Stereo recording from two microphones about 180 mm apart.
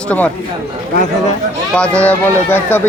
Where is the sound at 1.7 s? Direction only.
5° left (ahead or behind).